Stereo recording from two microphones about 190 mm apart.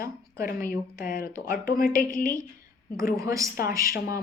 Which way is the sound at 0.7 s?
45° left (ahead or behind).